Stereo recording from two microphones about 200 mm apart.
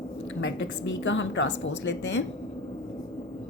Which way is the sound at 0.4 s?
70° left (ahead or behind).